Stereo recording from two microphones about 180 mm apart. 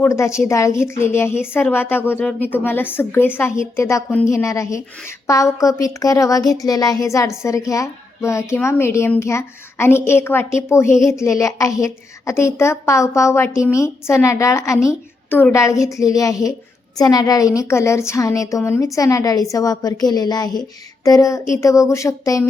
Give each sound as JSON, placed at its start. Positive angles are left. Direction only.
{"t": 0.0, "sound": "a woman's voice", "side_deg": 15}